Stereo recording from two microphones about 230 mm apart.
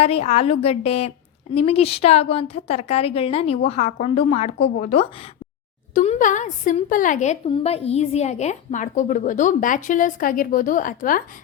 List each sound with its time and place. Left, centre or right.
0.0 s a woman's voice: left